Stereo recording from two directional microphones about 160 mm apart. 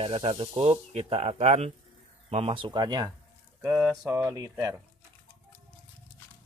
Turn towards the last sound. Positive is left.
turn(degrees=-25)  # may be behind; listen again after turning